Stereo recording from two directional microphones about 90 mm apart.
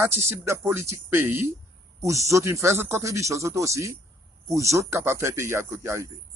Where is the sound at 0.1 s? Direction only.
30° right (ahead or behind).